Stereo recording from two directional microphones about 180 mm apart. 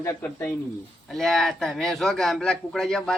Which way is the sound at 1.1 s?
Centre (ahead or behind).